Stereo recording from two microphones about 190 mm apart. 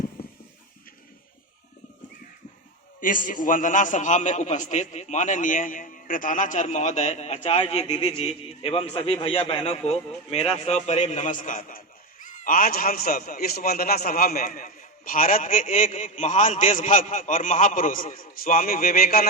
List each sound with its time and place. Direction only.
3.0 s a man's voice: 45° left (ahead or behind)